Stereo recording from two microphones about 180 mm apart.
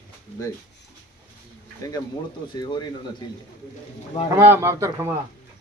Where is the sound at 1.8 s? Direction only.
20° left (ahead or behind).